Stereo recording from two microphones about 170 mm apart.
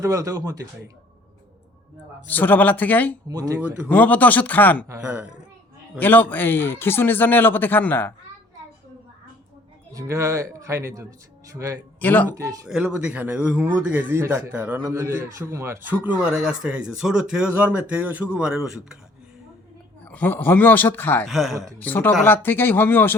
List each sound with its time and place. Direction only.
0.0 s speech: 20° right (ahead or behind)
2.2 s a man's voice: 10° left (ahead or behind)
3.2 s speech: 20° right (ahead or behind)
3.8 s a man's voice: 10° left (ahead or behind)
4.9 s a man's voice: 10° right (ahead or behind)
6.0 s a man's voice: 10° left (ahead or behind)
9.9 s a man's voice: 20° right (ahead or behind)
11.9 s speech: 10° left (ahead or behind)
12.3 s speech: 20° right (ahead or behind)
12.6 s a man's voice: 5° right (ahead or behind)
20.1 s a man's voice: 10° left (ahead or behind)
21.2 s speech: centre (ahead or behind)
21.5 s speech: 20° right (ahead or behind)
21.8 s a man's voice: 10° left (ahead or behind)